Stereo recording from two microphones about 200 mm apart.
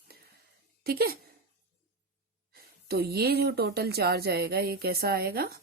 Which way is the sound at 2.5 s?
50° right (ahead or behind).